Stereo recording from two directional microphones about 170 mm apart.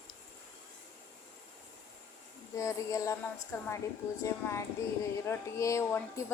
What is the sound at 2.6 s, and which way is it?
Speech, 15° left (ahead or behind).